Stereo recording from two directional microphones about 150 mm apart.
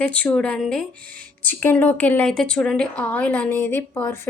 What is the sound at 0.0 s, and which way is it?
Speech, 10° left (ahead or behind).